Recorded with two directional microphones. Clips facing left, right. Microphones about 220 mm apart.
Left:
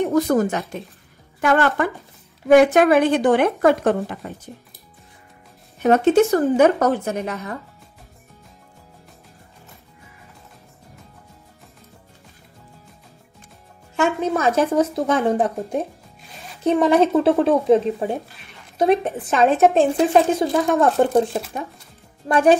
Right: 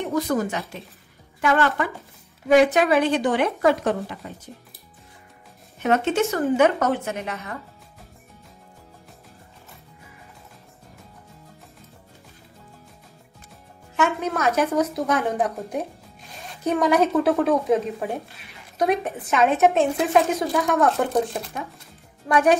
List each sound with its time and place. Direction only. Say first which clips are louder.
0.1 s a woman's voice: left 5 dB; 45° left (ahead or behind)
5.8 s speech: left 6 dB; 35° left (ahead or behind)
13.9 s a woman's voice: left 3 dB; 30° left (ahead or behind)
22.3 s a woman's voice: left 3 dB; 30° left (ahead or behind)